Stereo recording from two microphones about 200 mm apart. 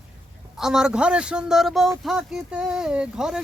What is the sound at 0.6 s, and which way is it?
A child's voice, 5° right (ahead or behind).